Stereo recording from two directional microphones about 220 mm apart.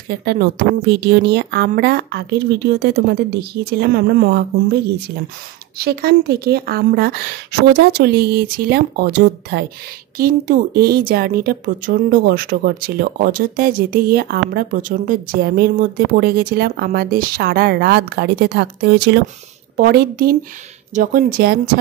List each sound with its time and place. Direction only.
0.2 s speech: 45° right (ahead or behind)
5.8 s speech: 45° right (ahead or behind)